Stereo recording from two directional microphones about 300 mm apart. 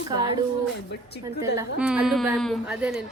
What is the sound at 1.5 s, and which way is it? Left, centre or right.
A woman's voice, centre.